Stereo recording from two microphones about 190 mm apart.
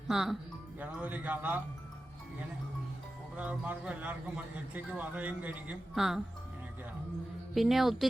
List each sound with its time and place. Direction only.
0.1 s a woman's voice: centre (ahead or behind)
3.3 s a man's voice: 5° right (ahead or behind)
7.5 s a woman's voice: centre (ahead or behind)